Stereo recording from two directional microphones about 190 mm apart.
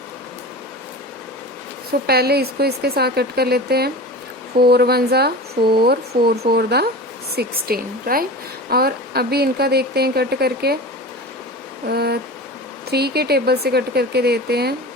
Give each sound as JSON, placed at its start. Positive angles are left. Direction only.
{"t": 2.0, "sound": "a woman's voice", "side_deg": -55}
{"t": 11.9, "sound": "speech", "side_deg": -55}